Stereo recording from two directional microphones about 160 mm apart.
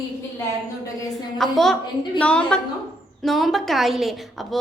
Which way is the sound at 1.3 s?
Centre (ahead or behind).